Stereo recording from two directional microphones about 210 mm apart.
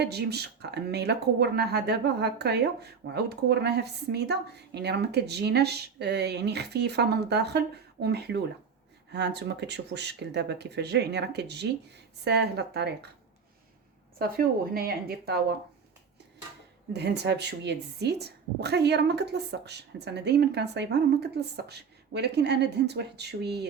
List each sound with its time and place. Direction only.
0.0 s speech: 50° right (ahead or behind)
14.2 s speech: 45° right (ahead or behind)
16.9 s speech: 55° right (ahead or behind)